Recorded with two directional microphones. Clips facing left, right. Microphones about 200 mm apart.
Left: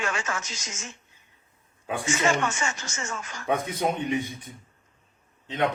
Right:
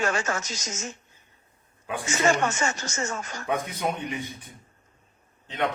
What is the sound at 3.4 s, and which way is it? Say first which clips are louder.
Speech: left 2 dB; 25° left (ahead or behind).